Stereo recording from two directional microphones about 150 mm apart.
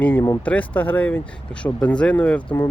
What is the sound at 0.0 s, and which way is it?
Speech, 15° left (ahead or behind).